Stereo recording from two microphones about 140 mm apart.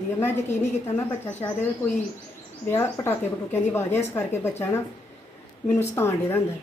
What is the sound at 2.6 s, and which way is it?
A woman's voice, 15° left (ahead or behind).